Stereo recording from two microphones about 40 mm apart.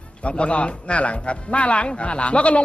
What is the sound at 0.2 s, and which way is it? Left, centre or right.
A man's voice, left.